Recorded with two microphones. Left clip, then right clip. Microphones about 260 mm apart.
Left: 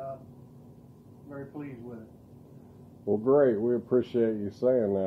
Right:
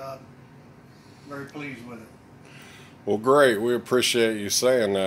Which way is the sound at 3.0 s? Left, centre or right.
Right.